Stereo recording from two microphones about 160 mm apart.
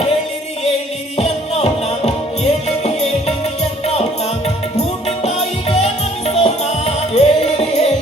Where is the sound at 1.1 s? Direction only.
40° left (ahead or behind).